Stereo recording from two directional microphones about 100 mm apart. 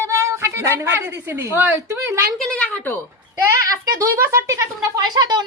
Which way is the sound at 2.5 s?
15° left (ahead or behind).